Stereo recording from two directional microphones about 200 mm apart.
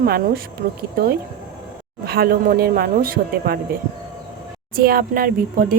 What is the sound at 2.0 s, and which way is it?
Speech, 50° right (ahead or behind).